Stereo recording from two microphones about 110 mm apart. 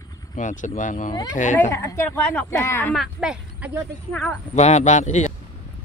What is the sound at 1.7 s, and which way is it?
Speech, 25° left (ahead or behind).